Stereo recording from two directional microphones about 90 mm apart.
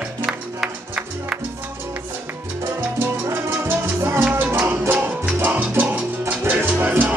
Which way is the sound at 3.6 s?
25° right (ahead or behind).